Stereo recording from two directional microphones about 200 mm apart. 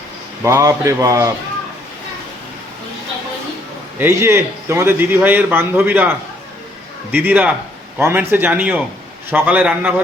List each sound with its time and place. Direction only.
0.4 s a man's voice: 15° right (ahead or behind)
3.9 s a man's voice: 10° right (ahead or behind)
7.1 s a man's voice: 10° right (ahead or behind)